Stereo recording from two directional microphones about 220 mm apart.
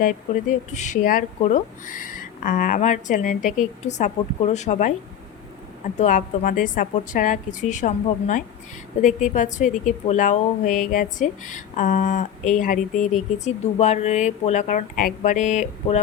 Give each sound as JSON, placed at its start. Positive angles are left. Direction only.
{"t": 0.7, "sound": "a woman's voice", "side_deg": 35}
{"t": 6.0, "sound": "a woman's voice", "side_deg": 35}